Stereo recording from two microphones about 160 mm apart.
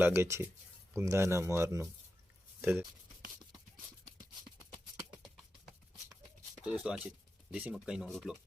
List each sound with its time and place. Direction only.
0.0 s speech: 15° right (ahead or behind)
6.6 s speech: 10° right (ahead or behind)